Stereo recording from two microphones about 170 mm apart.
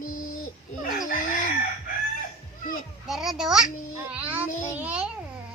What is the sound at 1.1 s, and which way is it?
Chicken, 50° left (ahead or behind).